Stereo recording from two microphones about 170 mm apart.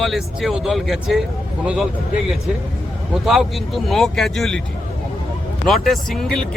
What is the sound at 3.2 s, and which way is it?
Speech, centre (ahead or behind).